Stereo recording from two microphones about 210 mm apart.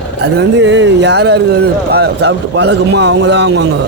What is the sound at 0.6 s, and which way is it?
A man's voice, 55° right (ahead or behind).